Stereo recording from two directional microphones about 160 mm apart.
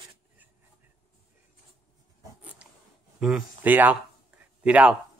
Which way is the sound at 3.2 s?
5° right (ahead or behind).